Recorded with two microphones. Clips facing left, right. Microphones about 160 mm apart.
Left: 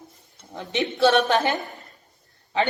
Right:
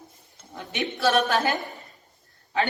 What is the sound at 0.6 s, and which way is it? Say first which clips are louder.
A woman's voice: left 5 dB; 25° left (ahead or behind).